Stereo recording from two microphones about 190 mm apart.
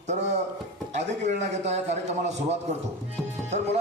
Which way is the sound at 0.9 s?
35° right (ahead or behind).